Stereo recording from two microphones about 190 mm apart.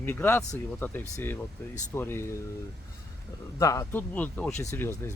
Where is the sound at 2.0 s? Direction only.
10° left (ahead or behind).